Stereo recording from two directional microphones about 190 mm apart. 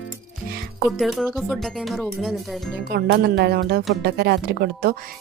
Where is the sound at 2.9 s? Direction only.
55° right (ahead or behind).